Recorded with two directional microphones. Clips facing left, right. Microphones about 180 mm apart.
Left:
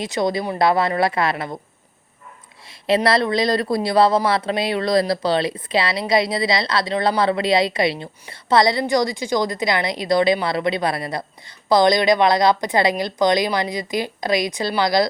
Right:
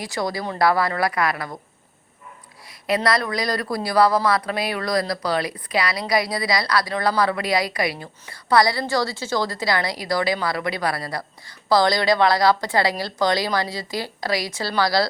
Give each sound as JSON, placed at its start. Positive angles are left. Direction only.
{"t": 0.0, "sound": "speech", "side_deg": 20}
{"t": 2.6, "sound": "speech", "side_deg": 25}